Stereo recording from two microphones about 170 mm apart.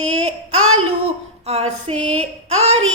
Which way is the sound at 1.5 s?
40° right (ahead or behind).